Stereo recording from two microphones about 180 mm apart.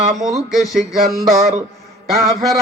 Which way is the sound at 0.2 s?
Centre (ahead or behind).